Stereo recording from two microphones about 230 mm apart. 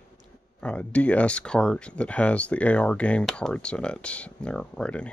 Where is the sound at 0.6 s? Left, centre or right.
Centre.